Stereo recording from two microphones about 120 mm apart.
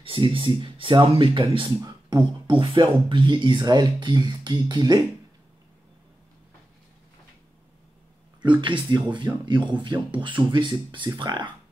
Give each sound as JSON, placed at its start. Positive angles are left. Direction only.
{"t": 0.0, "sound": "speech", "side_deg": -45}
{"t": 1.9, "sound": "beatboxing", "side_deg": -40}
{"t": 2.7, "sound": "speech", "side_deg": -40}
{"t": 8.5, "sound": "speech", "side_deg": -40}